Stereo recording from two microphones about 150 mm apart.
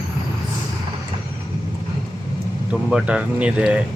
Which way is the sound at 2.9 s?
10° right (ahead or behind).